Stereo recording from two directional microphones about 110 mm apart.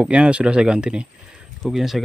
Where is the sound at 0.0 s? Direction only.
10° right (ahead or behind).